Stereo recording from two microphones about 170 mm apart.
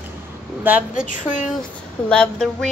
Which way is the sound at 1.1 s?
50° left (ahead or behind).